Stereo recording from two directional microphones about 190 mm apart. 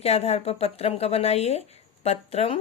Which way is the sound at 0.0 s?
35° left (ahead or behind).